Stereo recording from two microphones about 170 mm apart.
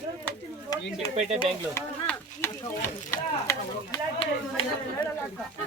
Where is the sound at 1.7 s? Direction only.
10° left (ahead or behind).